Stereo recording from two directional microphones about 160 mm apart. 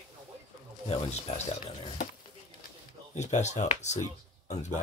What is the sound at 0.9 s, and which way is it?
Speech, 40° left (ahead or behind).